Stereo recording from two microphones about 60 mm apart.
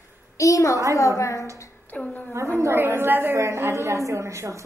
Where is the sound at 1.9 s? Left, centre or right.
Left.